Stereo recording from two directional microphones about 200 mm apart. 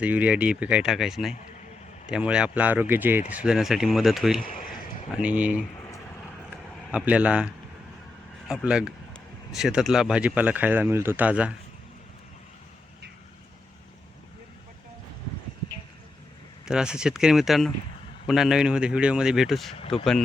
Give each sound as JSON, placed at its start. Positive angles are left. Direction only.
{"t": 0.0, "sound": "speech", "side_deg": -5}
{"t": 4.4, "sound": "a sound", "side_deg": 45}
{"t": 5.1, "sound": "speech", "side_deg": -5}
{"t": 6.7, "sound": "speech", "side_deg": 0}
{"t": 16.6, "sound": "speech", "side_deg": -5}